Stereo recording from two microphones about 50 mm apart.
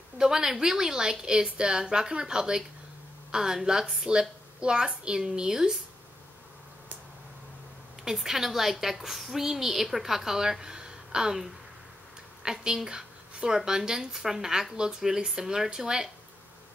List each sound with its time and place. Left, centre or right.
0.2 s speech: centre
8.0 s speech: centre
12.4 s speech: centre